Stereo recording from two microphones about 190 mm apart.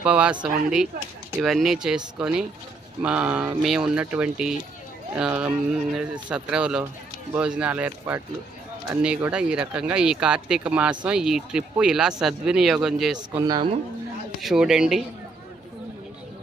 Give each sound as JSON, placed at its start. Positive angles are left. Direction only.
{"t": 0.0, "sound": "speech", "side_deg": -5}
{"t": 13.3, "sound": "speech", "side_deg": -20}
{"t": 14.4, "sound": "speech", "side_deg": 0}